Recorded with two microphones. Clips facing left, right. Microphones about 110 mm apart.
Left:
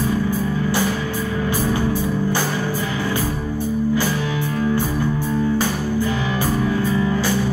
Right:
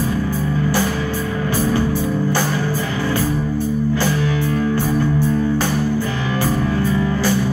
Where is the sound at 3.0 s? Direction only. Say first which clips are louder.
Right 3 dB; 15° left (ahead or behind).